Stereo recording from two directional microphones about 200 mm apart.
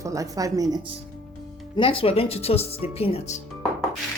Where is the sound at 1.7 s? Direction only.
25° left (ahead or behind).